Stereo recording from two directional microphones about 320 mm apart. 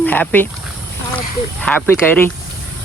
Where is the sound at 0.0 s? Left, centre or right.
Centre.